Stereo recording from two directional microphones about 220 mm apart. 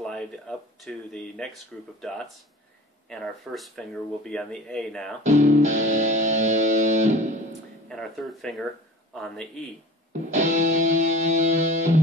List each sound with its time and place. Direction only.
0.0 s speech: centre (ahead or behind)
5.2 s music: 30° right (ahead or behind)
7.9 s speech: centre (ahead or behind)
10.3 s music: 35° right (ahead or behind)